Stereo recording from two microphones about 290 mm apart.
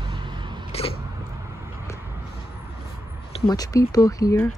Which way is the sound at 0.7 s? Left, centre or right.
Left.